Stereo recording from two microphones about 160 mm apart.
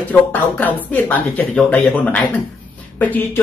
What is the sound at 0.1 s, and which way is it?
Speech, 10° left (ahead or behind).